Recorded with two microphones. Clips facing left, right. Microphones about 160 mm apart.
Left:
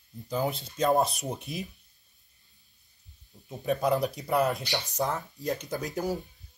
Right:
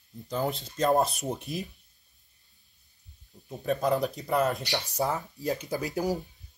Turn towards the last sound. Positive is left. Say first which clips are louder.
# right 2 dB
turn(degrees=-5)  # may be behind; listen again after turning